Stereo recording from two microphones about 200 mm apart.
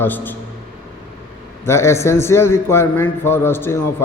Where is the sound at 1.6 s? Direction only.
15° left (ahead or behind).